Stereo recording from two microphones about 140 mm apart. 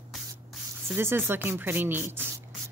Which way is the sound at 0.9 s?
15° right (ahead or behind).